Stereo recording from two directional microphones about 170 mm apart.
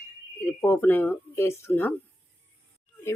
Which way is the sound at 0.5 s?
10° left (ahead or behind).